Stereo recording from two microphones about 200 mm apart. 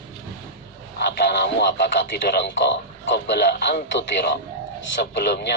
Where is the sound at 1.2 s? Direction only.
55° left (ahead or behind).